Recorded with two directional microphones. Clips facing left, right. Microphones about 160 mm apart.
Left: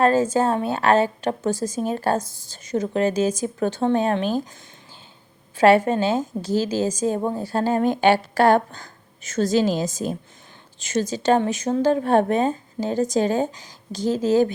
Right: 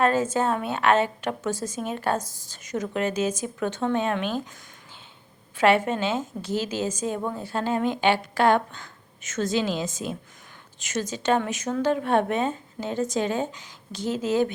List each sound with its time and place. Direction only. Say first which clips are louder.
0.0 s a woman's voice: left 4 dB; 30° left (ahead or behind)
5.5 s a woman's voice: left 5 dB; 35° left (ahead or behind)